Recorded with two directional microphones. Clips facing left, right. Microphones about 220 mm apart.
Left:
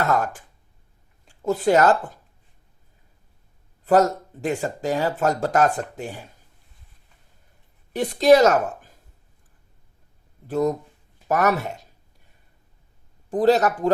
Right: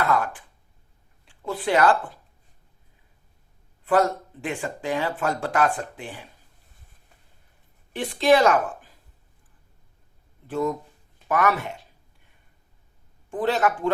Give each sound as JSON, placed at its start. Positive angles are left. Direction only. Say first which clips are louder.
{"t": 0.0, "sound": "speech", "louder": "left 1 dB", "side_deg": 45}
{"t": 3.8, "sound": "speech", "louder": "left 3 dB", "side_deg": 40}
{"t": 7.9, "sound": "a woman's voice", "louder": "left 4 dB", "side_deg": 40}
{"t": 10.4, "sound": "speech", "louder": "left 4 dB", "side_deg": 40}
{"t": 13.3, "sound": "speech", "louder": "left 5 dB", "side_deg": 40}